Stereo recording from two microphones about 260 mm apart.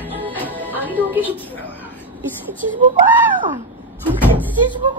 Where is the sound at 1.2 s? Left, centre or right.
Centre.